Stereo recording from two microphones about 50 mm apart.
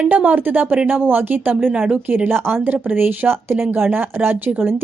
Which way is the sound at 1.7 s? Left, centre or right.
Right.